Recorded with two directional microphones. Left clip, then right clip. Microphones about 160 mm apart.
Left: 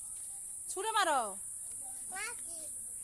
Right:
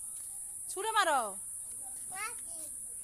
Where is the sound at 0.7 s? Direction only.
10° left (ahead or behind).